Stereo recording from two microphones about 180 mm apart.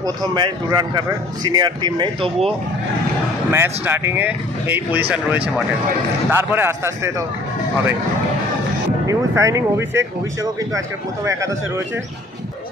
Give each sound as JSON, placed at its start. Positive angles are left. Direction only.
{"t": 0.0, "sound": "a man's voice", "side_deg": -25}
{"t": 3.5, "sound": "speech", "side_deg": -10}
{"t": 9.0, "sound": "speech", "side_deg": -15}